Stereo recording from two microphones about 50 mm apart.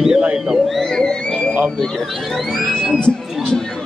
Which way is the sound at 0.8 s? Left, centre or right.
Centre.